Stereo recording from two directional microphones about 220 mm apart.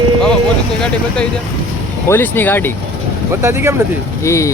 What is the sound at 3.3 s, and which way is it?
Speech, 10° right (ahead or behind).